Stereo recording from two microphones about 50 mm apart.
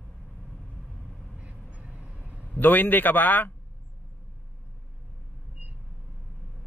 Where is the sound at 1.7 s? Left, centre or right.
Right.